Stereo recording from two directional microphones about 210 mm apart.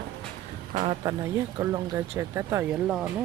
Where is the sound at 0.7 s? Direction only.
25° right (ahead or behind).